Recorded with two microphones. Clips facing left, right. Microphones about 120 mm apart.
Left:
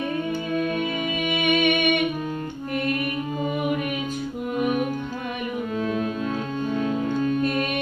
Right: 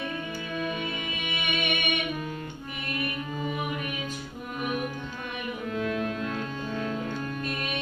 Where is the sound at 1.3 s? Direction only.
50° left (ahead or behind).